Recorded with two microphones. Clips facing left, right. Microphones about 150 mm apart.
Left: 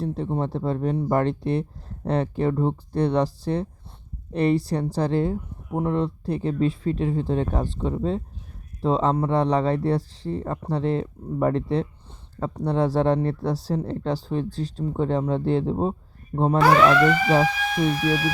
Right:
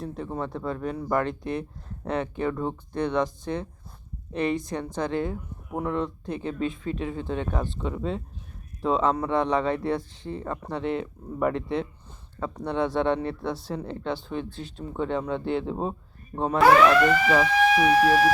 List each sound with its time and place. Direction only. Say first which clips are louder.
0.0 s speech: left 5 dB; 30° left (ahead or behind)
16.6 s speech: right 1 dB; centre (ahead or behind)
18.0 s speech: right 4 dB; 40° right (ahead or behind)